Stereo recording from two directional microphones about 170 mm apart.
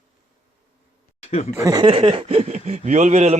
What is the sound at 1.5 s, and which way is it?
Speech, 20° right (ahead or behind).